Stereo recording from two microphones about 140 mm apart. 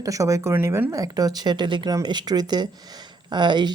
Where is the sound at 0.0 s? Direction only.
25° right (ahead or behind).